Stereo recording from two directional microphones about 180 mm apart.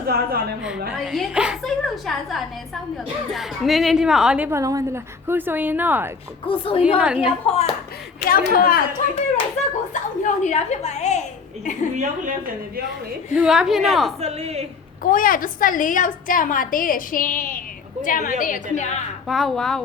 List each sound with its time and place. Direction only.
0.1 s a woman's voice: 55° right (ahead or behind)
0.9 s a woman's voice: centre (ahead or behind)
6.4 s a woman's voice: 30° left (ahead or behind)
6.8 s a woman's voice: 5° right (ahead or behind)
7.4 s a woman's voice: 35° left (ahead or behind)
8.3 s a woman's voice: 55° left (ahead or behind)
9.9 s a woman's voice: 40° left (ahead or behind)
11.9 s a woman's voice: 45° right (ahead or behind)
13.3 s a woman's voice: 5° right (ahead or behind)
14.2 s a woman's voice: 35° right (ahead or behind)
15.0 s a woman's voice: 50° left (ahead or behind)
19.3 s a woman's voice: centre (ahead or behind)